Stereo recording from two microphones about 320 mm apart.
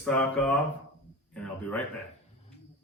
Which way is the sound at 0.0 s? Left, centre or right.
Centre.